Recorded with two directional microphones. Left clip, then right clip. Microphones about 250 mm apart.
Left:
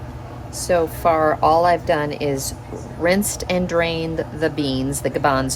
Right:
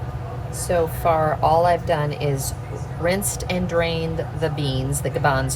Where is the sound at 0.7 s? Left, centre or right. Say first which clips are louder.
Left 2 dB; left.